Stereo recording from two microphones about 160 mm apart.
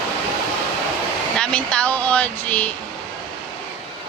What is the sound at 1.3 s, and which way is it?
Speech, 5° left (ahead or behind).